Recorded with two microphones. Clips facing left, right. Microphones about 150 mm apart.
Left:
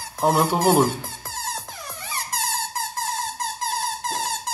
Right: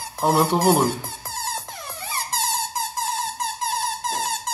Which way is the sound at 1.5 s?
30° right (ahead or behind).